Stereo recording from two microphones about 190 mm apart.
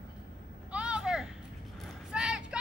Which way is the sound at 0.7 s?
5° right (ahead or behind).